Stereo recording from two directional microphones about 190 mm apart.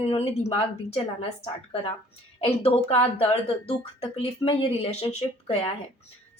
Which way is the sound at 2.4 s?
30° left (ahead or behind).